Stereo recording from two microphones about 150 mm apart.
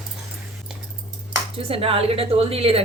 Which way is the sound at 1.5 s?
40° right (ahead or behind).